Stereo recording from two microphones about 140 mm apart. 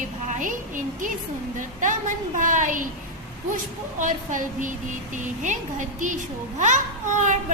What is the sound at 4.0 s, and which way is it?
A woman's voice, 65° right (ahead or behind).